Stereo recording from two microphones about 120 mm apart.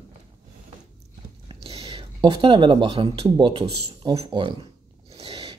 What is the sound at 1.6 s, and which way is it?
Speech, 50° right (ahead or behind).